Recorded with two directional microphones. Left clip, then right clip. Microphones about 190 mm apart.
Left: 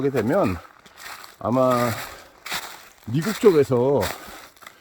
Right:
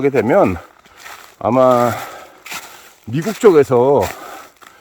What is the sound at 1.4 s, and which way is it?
Speech, 50° right (ahead or behind).